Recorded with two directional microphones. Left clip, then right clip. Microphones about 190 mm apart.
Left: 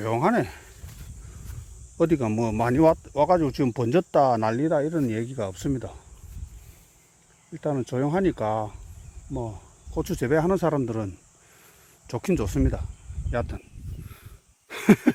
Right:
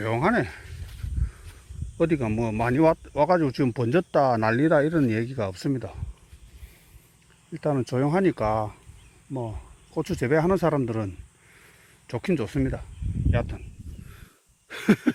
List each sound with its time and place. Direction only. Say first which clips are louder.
0.0 s speech: left 1 dB; 20° left (ahead or behind)
2.0 s speech: left 1 dB; 25° left (ahead or behind)
4.5 s speech: right 3 dB; 10° right (ahead or behind); by 6.0 s 15° left (ahead or behind)
7.5 s speech: right 2 dB; centre (ahead or behind); by 13.6 s 35° left (ahead or behind)
14.7 s a sound: left 3 dB; 50° left (ahead or behind)